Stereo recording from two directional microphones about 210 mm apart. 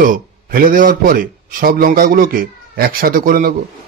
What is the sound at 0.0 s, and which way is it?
Speech, 40° right (ahead or behind).